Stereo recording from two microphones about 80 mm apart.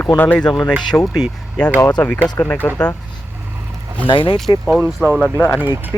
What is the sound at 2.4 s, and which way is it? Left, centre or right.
Speech, left.